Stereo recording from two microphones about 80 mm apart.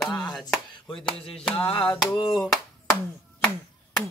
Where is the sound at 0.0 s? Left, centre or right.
Centre.